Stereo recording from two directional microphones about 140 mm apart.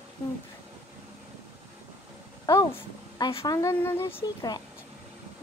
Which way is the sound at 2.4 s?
25° left (ahead or behind).